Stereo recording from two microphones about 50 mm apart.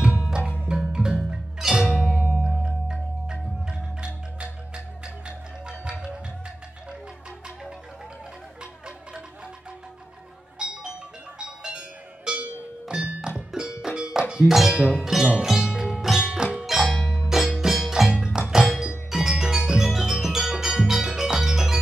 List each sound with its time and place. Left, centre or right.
0.7 s music: centre
10.6 s music: centre
13.8 s a sound: centre
14.5 s speech: centre
14.8 s speech: right
15.0 s music: centre